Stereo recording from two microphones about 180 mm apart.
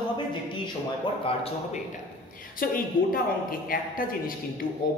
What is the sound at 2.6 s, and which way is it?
A woman's voice, 50° left (ahead or behind).